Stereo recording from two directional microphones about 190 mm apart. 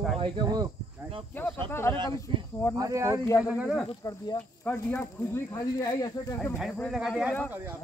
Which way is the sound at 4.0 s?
20° left (ahead or behind).